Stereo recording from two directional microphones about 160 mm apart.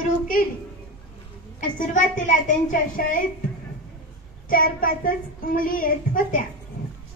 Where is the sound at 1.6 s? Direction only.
55° left (ahead or behind).